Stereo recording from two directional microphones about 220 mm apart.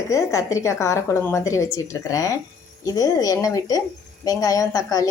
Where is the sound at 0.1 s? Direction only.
15° left (ahead or behind).